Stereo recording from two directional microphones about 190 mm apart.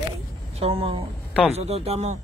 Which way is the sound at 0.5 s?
30° right (ahead or behind).